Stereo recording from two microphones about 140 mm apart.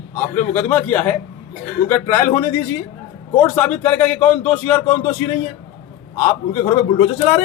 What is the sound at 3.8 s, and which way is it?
Speech, 10° left (ahead or behind).